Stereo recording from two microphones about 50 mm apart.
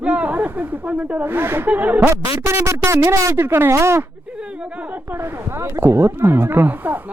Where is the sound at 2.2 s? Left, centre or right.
Right.